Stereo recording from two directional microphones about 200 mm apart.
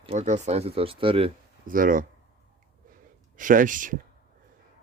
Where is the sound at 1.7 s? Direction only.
45° right (ahead or behind).